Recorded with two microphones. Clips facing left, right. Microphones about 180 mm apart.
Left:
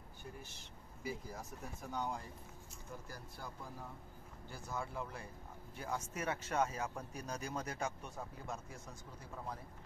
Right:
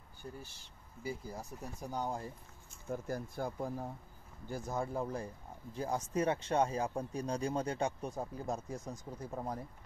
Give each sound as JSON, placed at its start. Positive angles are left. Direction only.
{"t": 0.2, "sound": "speech", "side_deg": -30}